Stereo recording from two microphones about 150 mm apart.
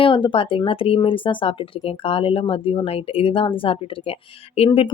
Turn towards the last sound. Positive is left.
turn(degrees=40)  # may be behind; listen again after turning